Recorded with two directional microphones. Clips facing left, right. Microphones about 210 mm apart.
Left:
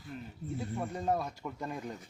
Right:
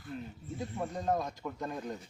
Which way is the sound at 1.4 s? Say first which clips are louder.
Right 1 dB; 5° left (ahead or behind).